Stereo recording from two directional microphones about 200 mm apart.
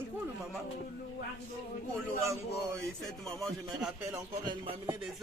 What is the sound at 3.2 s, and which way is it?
Speech, centre (ahead or behind).